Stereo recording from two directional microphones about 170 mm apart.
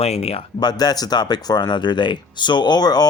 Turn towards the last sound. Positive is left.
turn(degrees=25)  # may be behind; listen again after turning